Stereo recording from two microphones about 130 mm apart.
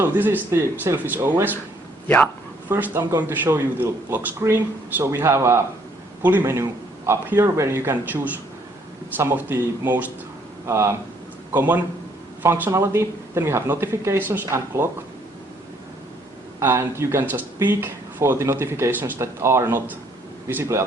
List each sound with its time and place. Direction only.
0.0 s speech: 15° right (ahead or behind)
2.0 s speech: 10° left (ahead or behind)
2.6 s speech: 20° right (ahead or behind)
16.6 s speech: 20° right (ahead or behind)